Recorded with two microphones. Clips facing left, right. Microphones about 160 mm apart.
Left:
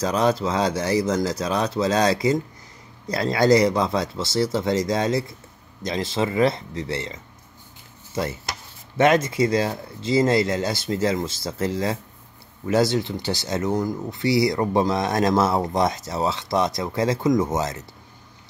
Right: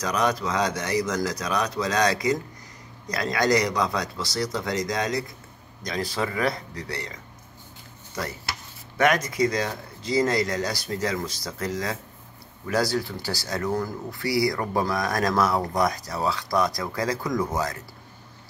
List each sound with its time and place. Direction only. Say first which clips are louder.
0.0 s speech: left 4 dB; 30° left (ahead or behind)